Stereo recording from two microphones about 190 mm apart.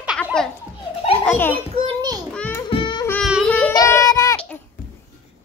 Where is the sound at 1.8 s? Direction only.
20° right (ahead or behind).